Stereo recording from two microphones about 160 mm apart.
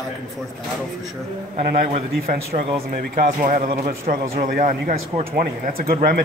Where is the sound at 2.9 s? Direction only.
60° right (ahead or behind).